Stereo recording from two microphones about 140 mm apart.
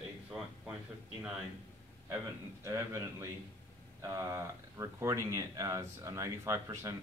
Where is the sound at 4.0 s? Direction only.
25° right (ahead or behind).